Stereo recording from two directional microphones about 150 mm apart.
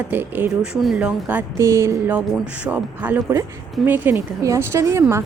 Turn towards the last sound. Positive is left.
turn(degrees=-20)  # may be behind; listen again after turning